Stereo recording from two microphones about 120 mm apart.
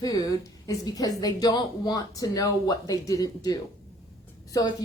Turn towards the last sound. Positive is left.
turn(degrees=30)  # may be behind; listen again after turning